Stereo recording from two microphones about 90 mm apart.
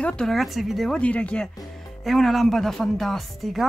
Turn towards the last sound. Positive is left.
turn(degrees=0)  # may be behind; listen again after turning